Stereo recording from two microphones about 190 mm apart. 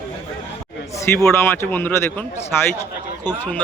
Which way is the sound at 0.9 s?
15° left (ahead or behind).